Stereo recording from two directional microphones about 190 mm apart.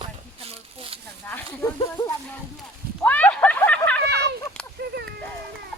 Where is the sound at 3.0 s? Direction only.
10° left (ahead or behind).